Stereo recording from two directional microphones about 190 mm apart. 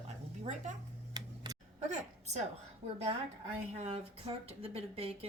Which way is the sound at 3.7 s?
30° right (ahead or behind).